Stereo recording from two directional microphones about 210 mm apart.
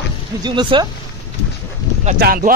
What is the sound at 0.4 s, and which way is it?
Speech, 20° right (ahead or behind).